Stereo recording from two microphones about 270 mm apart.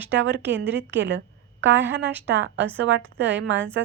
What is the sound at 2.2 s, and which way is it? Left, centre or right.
Speech, right.